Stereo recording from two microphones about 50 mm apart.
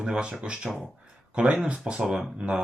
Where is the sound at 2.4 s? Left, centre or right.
Centre.